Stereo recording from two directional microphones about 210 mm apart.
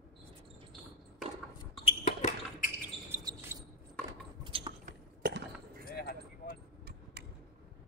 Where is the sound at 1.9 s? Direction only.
35° left (ahead or behind).